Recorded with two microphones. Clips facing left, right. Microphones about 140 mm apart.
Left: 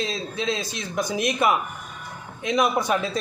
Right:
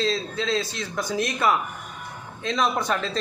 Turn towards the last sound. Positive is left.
turn(degrees=10)  # may be behind; listen again after turning